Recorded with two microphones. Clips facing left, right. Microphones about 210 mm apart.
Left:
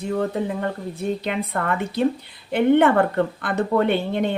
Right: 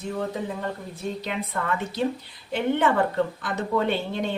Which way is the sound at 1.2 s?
60° left (ahead or behind).